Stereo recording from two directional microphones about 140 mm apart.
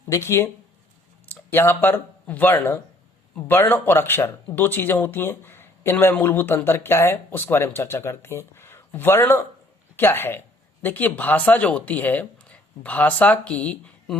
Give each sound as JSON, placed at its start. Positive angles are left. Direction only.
{"t": 0.1, "sound": "speech", "side_deg": 20}